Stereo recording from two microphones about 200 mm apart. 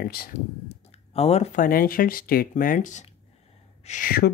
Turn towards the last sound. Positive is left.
turn(degrees=45)  # may be behind; listen again after turning